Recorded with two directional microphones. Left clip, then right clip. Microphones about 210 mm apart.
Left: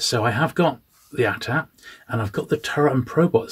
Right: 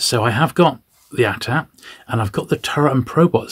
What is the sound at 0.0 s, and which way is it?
Speech, 40° right (ahead or behind).